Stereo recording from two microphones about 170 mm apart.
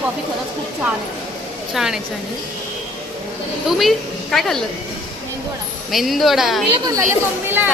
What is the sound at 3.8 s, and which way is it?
Speech, centre (ahead or behind).